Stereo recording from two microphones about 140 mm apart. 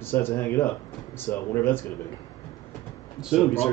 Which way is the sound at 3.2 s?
5° right (ahead or behind).